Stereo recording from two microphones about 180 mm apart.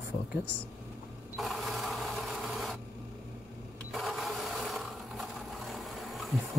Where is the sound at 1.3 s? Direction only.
Centre (ahead or behind).